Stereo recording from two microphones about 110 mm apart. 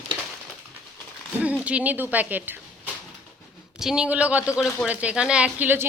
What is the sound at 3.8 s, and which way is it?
Speech, 5° right (ahead or behind).